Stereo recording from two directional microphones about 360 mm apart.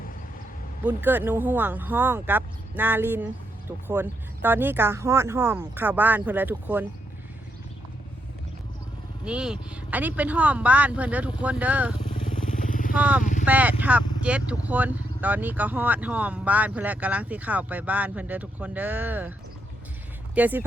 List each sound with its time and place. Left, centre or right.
0.9 s speech: centre
9.2 s speech: centre
11.9 s motorcycle: centre
13.0 s speech: centre
20.3 s speech: centre